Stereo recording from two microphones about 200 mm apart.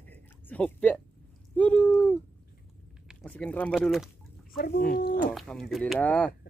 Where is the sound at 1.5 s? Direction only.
5° left (ahead or behind).